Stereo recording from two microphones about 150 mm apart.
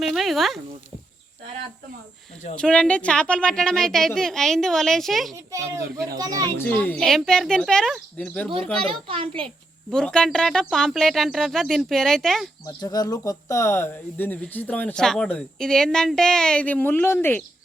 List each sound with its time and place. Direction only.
0.0 s speech: centre (ahead or behind)
2.6 s a woman's voice: 5° left (ahead or behind)
6.1 s speech: 25° right (ahead or behind)
6.6 s a woman's voice: 10° left (ahead or behind)
8.8 s a child's voice: 40° right (ahead or behind)
9.9 s a woman's voice: 5° left (ahead or behind)
12.6 s speech: 25° left (ahead or behind)